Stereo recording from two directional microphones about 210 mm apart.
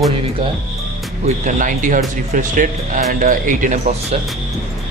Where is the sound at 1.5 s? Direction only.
40° right (ahead or behind).